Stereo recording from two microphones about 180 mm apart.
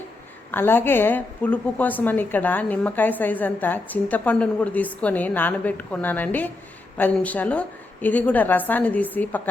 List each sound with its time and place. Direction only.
0.5 s a woman's voice: 10° left (ahead or behind)